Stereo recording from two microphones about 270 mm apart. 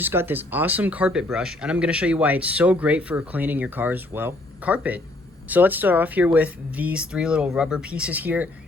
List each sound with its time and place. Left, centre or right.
0.0 s speech: centre